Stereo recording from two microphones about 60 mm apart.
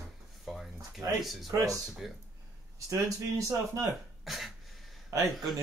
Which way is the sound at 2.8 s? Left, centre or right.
Right.